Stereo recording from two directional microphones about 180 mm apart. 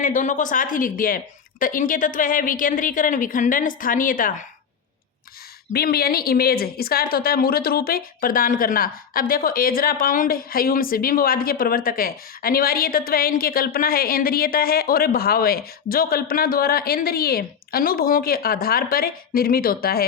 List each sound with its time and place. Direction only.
0.0 s speech: 45° left (ahead or behind)
5.7 s a woman's voice: 60° left (ahead or behind)